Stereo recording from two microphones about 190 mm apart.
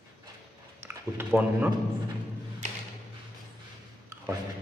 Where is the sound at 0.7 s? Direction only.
10° right (ahead or behind).